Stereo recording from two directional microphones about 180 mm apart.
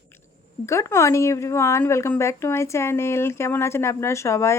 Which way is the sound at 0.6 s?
15° left (ahead or behind).